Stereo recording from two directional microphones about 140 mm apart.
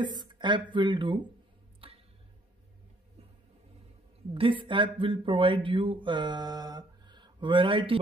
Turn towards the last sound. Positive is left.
turn(degrees=-40)  # may be behind; listen again after turning